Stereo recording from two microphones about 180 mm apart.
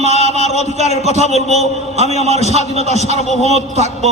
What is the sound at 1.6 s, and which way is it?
A man's voice, 35° right (ahead or behind).